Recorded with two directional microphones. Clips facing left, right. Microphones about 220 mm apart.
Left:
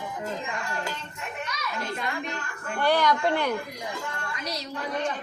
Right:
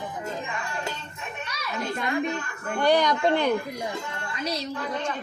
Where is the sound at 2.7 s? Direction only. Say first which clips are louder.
Right 2 dB; 20° right (ahead or behind).